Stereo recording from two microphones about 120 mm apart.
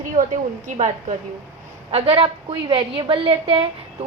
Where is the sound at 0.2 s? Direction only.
90° right.